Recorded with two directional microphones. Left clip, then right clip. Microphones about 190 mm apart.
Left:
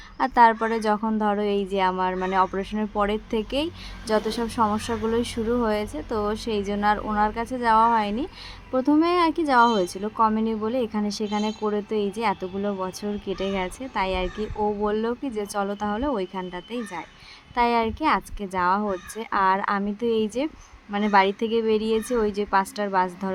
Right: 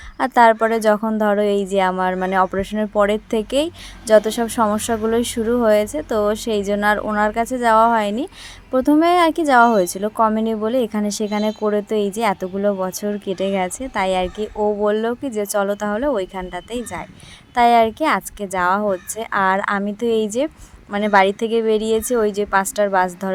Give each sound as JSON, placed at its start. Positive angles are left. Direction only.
{"t": 0.2, "sound": "a woman's voice", "side_deg": -30}